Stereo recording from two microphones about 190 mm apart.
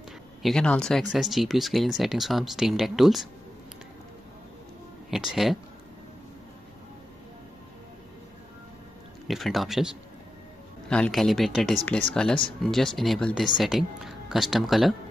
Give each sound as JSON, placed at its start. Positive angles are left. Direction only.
{"t": 0.4, "sound": "speech", "side_deg": 5}
{"t": 5.1, "sound": "speech", "side_deg": 0}
{"t": 9.3, "sound": "speech", "side_deg": 0}
{"t": 10.9, "sound": "speech", "side_deg": 5}